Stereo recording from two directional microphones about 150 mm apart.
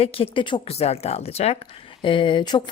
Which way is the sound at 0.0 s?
40° left (ahead or behind).